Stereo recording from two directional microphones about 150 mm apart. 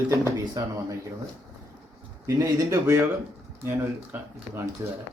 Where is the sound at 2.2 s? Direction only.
20° right (ahead or behind).